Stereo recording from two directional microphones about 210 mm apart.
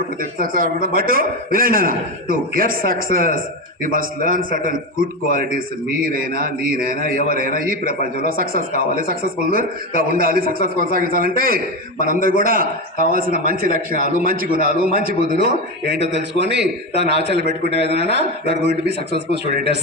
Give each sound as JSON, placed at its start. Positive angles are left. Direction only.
{"t": 0.2, "sound": "a man's voice", "side_deg": -40}